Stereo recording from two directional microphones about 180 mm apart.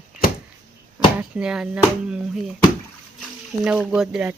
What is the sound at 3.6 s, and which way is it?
Speech, 5° right (ahead or behind).